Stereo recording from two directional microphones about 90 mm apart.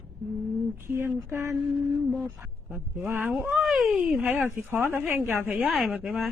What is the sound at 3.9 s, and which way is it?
Speech, 15° right (ahead or behind).